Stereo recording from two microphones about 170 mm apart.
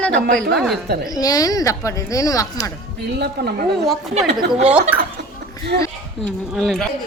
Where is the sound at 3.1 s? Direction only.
70° right (ahead or behind).